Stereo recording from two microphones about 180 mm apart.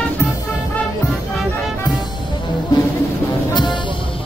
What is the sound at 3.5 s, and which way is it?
Music, 25° left (ahead or behind).